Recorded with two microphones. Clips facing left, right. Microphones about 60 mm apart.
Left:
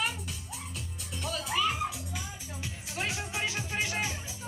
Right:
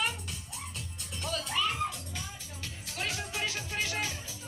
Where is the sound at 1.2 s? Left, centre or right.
Centre.